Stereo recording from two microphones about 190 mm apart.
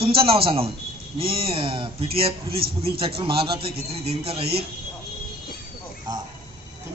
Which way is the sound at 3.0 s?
30° right (ahead or behind).